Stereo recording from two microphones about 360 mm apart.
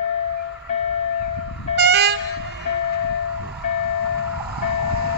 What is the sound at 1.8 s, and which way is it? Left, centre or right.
Train, right.